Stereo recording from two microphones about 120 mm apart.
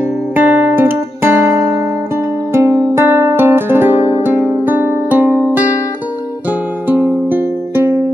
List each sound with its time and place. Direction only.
0.4 s music: 15° right (ahead or behind)
6.9 s music: 15° right (ahead or behind)